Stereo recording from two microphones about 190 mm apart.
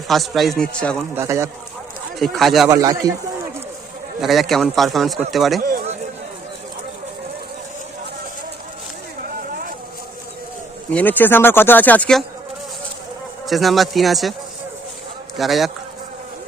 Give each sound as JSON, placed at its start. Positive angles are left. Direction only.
{"t": 0.1, "sound": "a man's voice", "side_deg": 0}
{"t": 1.1, "sound": "a man's voice", "side_deg": -15}
{"t": 2.1, "sound": "a man's voice", "side_deg": 0}
{"t": 2.6, "sound": "a man's voice", "side_deg": -20}
{"t": 4.2, "sound": "a man's voice", "side_deg": 0}
{"t": 5.5, "sound": "a sound", "side_deg": -50}
{"t": 10.9, "sound": "speech", "side_deg": 10}
{"t": 13.5, "sound": "a man's voice", "side_deg": 0}
{"t": 15.4, "sound": "a man's voice", "side_deg": 0}